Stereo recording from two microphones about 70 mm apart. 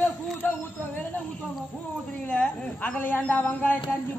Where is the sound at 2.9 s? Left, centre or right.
Left.